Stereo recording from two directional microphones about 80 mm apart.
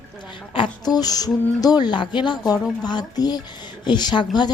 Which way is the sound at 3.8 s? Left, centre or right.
Left.